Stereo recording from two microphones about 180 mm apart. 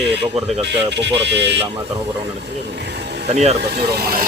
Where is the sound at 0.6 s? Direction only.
75° right (ahead or behind).